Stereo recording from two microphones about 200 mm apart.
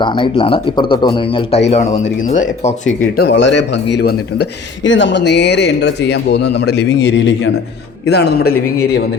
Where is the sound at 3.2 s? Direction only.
60° left (ahead or behind).